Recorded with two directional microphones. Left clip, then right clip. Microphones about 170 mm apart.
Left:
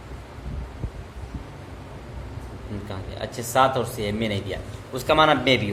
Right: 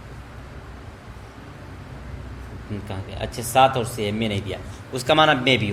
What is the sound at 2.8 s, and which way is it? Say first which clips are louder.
Speech: right 1 dB; 30° right (ahead or behind).